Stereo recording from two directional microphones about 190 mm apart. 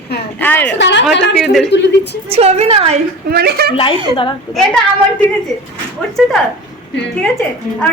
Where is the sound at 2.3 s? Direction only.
35° right (ahead or behind).